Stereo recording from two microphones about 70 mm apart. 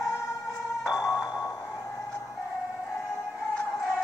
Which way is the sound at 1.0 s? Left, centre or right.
Left.